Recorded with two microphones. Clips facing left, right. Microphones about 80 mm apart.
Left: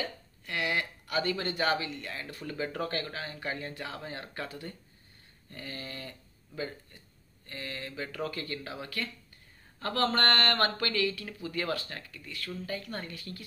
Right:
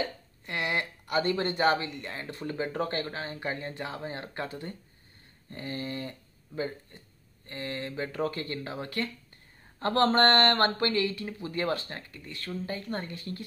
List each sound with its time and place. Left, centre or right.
0.0 s speech: right